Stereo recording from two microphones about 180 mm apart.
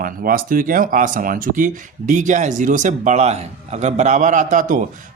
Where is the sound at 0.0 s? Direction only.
50° right (ahead or behind).